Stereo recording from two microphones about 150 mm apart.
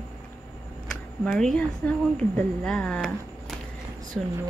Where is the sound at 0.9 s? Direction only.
5° left (ahead or behind).